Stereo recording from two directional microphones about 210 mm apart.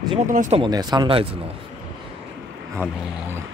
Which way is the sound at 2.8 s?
10° right (ahead or behind).